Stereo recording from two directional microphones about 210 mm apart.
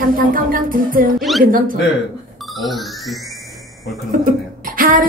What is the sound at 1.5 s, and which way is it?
Speech, 40° right (ahead or behind).